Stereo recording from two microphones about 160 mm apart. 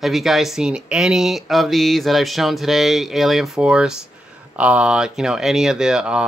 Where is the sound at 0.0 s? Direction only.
Centre (ahead or behind).